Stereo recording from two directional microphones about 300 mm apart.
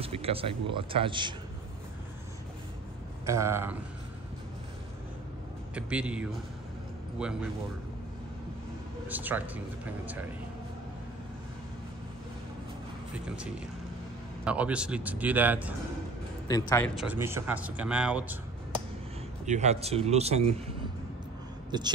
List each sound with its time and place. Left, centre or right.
0.0 s speech: centre
3.3 s speech: centre
5.8 s speech: centre
9.0 s speech: centre
14.4 s speech: centre
16.4 s a man's voice: centre
16.9 s speech: centre
19.4 s speech: right
21.6 s speech: centre